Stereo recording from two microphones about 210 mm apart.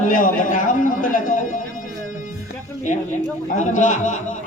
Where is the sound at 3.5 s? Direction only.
35° left (ahead or behind).